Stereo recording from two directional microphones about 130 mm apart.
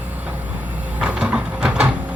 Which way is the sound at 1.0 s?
10° right (ahead or behind).